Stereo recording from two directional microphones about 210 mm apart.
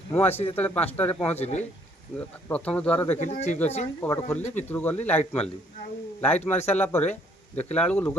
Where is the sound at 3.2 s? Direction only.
35° left (ahead or behind).